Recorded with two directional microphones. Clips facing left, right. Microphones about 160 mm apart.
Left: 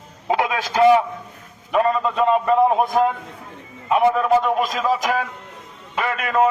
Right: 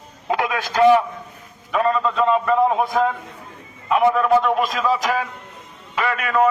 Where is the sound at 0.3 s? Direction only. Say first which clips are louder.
Left 1 dB; 15° left (ahead or behind).